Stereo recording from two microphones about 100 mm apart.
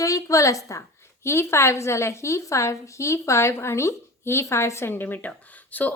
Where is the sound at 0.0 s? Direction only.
35° left (ahead or behind).